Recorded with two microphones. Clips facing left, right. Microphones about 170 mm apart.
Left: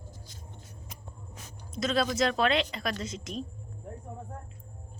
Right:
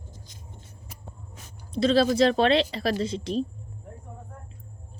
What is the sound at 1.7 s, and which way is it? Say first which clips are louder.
Speech: right 8 dB; 30° right (ahead or behind).